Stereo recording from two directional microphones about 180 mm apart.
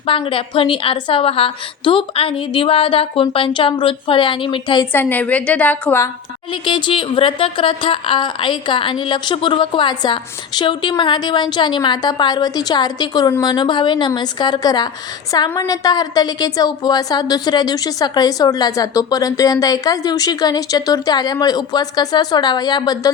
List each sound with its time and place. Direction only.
0.0 s speech: 30° left (ahead or behind)
4.9 s a woman's voice: 10° left (ahead or behind)
6.5 s speech: 25° left (ahead or behind)